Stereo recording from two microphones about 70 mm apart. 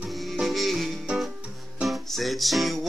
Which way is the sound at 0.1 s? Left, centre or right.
Centre.